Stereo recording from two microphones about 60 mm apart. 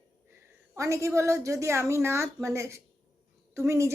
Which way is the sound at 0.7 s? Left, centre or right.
Right.